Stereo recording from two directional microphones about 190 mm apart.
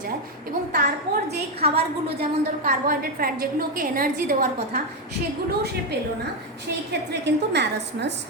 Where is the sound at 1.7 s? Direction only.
55° right (ahead or behind).